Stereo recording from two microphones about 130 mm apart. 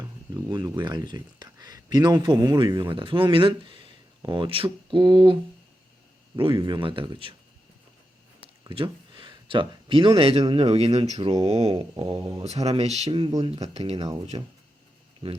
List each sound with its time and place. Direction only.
0.3 s speech: 30° right (ahead or behind)
8.7 s a sound: 40° right (ahead or behind)
10.2 s speech: 45° right (ahead or behind)
13.1 s speech: 40° right (ahead or behind)
13.4 s speech: 50° right (ahead or behind)
13.9 s speech: 30° right (ahead or behind)